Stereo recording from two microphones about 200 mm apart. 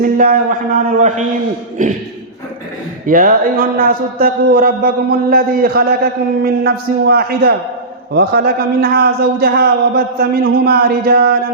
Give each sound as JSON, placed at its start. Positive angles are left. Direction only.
{"t": 0.0, "sound": "a man's voice", "side_deg": -45}
{"t": 3.1, "sound": "a man's voice", "side_deg": -45}